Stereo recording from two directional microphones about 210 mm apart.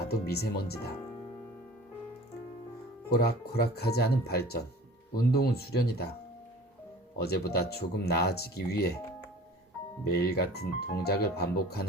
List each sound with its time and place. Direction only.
0.0 s speech: 50° left (ahead or behind)
3.1 s speech: 50° left (ahead or behind)
7.2 s speech: 50° left (ahead or behind)
10.0 s speech: 50° left (ahead or behind)